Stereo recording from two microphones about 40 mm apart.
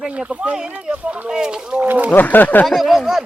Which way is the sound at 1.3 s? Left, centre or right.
Centre.